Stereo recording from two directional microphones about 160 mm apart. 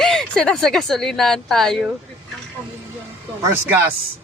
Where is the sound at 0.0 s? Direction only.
5° left (ahead or behind).